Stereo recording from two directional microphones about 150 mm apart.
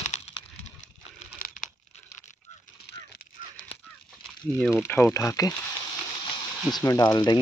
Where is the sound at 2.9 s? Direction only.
90° left.